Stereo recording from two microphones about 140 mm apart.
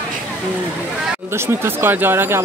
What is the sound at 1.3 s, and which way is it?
Speech, 15° right (ahead or behind).